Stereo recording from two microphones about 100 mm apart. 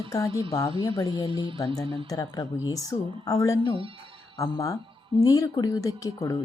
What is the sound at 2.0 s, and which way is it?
Speech, 35° left (ahead or behind).